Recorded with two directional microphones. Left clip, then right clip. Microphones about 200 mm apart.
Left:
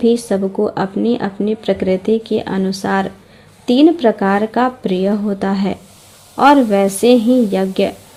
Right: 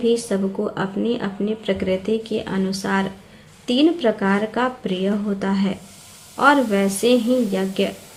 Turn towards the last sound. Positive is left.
turn(degrees=40)  # may be behind; listen again after turning